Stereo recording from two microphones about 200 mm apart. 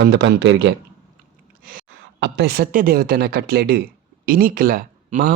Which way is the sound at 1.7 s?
60° right (ahead or behind).